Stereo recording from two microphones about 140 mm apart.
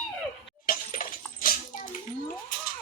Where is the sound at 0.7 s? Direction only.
85° left.